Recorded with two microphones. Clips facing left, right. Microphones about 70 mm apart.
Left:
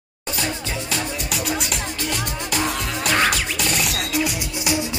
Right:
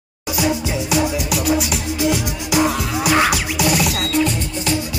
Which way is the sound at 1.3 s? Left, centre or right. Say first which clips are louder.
Right 4 dB; centre.